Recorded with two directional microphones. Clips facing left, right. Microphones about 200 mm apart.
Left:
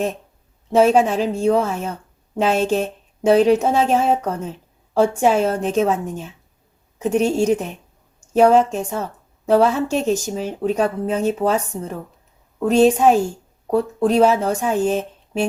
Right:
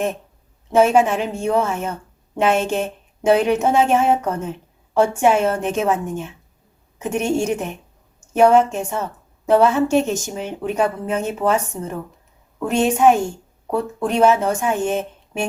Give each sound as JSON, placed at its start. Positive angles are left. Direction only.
{"t": 0.8, "sound": "a woman's voice", "side_deg": 35}